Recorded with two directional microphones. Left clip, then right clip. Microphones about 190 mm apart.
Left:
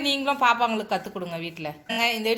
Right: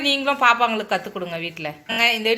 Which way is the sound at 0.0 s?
Centre (ahead or behind).